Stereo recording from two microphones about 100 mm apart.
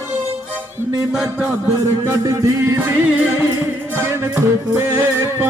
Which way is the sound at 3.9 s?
25° right (ahead or behind).